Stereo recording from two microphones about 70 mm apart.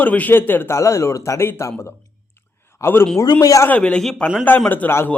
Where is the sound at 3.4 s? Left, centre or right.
Left.